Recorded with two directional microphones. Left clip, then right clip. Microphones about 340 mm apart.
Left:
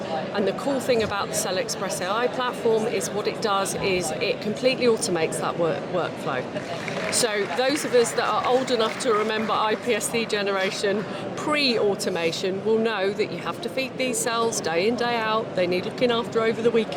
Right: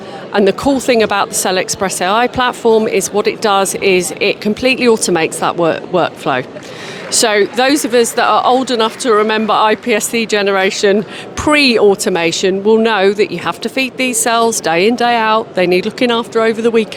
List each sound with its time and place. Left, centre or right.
0.3 s speech: right